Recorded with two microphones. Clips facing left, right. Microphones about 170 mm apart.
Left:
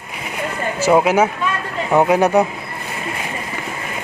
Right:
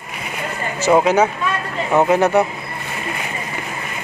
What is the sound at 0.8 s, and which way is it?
Speech, 10° left (ahead or behind).